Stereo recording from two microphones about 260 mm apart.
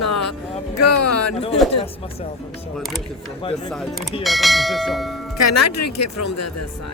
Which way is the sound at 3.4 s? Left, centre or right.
Centre.